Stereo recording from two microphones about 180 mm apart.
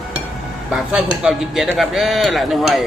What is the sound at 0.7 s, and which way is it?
Speech, 5° right (ahead or behind).